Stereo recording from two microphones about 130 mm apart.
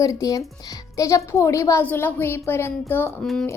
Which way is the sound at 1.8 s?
15° left (ahead or behind).